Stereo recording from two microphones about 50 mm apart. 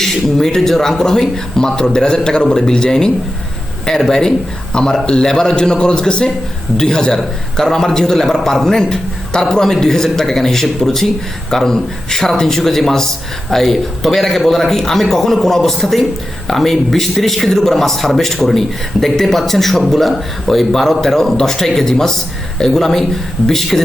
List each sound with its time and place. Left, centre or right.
0.0 s speech: centre